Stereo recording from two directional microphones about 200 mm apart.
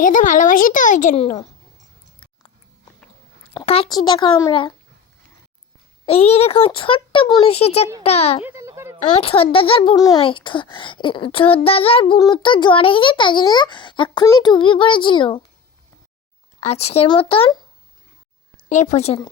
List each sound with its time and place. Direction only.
0.0 s a child's voice: 40° left (ahead or behind)
3.5 s a child's voice: 25° left (ahead or behind)
6.2 s a child's voice: 30° left (ahead or behind)
8.4 s a sound: 15° right (ahead or behind)
9.1 s a child's voice: 30° left (ahead or behind)
16.6 s a child's voice: 30° left (ahead or behind)
18.7 s a woman's voice: 35° left (ahead or behind)